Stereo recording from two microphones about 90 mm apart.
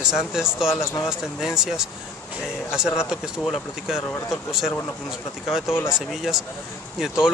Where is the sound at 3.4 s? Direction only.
Centre (ahead or behind).